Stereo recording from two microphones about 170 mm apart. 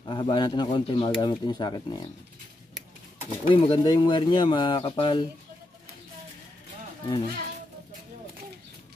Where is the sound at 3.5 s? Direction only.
30° left (ahead or behind).